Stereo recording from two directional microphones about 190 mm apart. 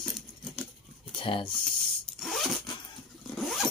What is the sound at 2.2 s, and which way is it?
Zipper, centre (ahead or behind).